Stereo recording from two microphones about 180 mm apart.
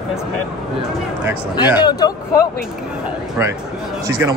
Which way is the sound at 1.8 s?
20° left (ahead or behind).